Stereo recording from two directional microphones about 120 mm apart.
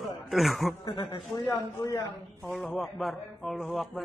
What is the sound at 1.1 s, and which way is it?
Speech, 40° left (ahead or behind).